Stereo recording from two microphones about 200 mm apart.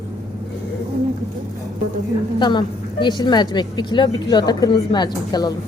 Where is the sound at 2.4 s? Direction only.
20° left (ahead or behind).